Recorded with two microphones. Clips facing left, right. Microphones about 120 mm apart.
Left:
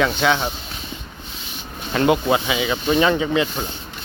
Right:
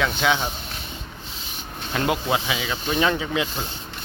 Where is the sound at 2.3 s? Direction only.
5° left (ahead or behind).